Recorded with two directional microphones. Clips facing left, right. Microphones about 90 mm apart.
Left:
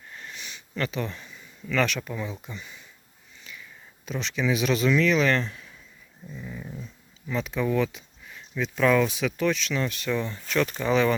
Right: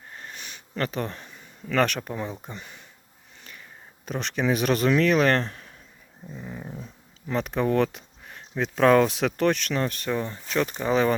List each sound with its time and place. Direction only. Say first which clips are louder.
0.1 s sniff: even; 40° right (ahead or behind)
1.6 s speech: right 2 dB; 50° right (ahead or behind)
6.2 s dog: right 1 dB; 35° right (ahead or behind)
7.3 s speech: right 2 dB; 60° right (ahead or behind); by 10.9 s 25° right (ahead or behind)